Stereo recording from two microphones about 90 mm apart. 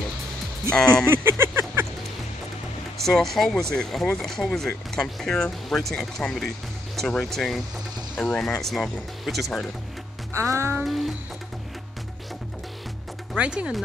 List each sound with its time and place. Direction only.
1.0 s a sound: 25° right (ahead or behind)
3.0 s speech: 5° left (ahead or behind)
10.3 s music: 35° right (ahead or behind)
10.9 s speech: centre (ahead or behind)
13.4 s speech: 10° right (ahead or behind)